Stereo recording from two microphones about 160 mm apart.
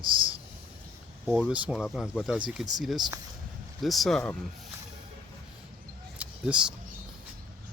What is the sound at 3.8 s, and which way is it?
Speech, centre (ahead or behind).